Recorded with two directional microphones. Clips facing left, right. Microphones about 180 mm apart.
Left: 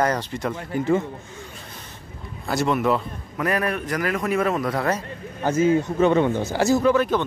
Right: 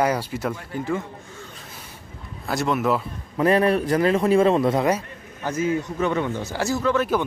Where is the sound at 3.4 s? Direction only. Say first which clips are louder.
Right 6 dB; 30° right (ahead or behind).